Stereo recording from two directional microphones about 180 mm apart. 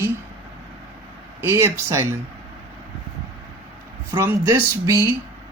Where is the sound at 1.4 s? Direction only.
15° right (ahead or behind).